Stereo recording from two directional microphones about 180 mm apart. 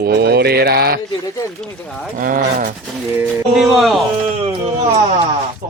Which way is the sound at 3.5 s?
Centre (ahead or behind).